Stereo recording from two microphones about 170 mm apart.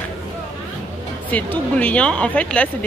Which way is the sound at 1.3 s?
10° left (ahead or behind).